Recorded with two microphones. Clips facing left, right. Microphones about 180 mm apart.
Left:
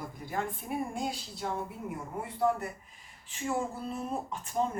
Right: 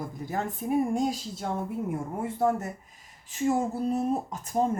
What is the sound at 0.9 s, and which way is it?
A woman's voice, 40° right (ahead or behind).